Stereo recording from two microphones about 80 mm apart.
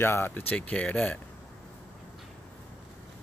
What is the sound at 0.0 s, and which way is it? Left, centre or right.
Speech, left.